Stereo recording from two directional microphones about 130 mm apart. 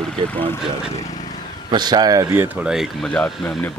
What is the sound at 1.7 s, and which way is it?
Speech, 35° right (ahead or behind).